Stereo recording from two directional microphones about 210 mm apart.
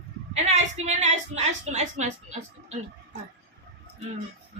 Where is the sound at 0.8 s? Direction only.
35° right (ahead or behind).